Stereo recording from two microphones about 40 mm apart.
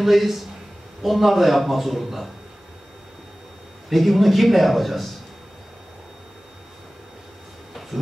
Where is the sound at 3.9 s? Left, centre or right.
Centre.